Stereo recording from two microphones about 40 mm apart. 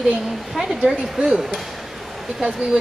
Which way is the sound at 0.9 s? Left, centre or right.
Centre.